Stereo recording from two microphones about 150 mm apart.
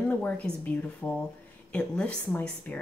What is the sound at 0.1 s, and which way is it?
Speech, 10° left (ahead or behind).